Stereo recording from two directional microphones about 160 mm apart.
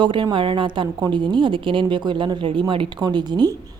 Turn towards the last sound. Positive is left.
turn(degrees=-25)  # may be behind; listen again after turning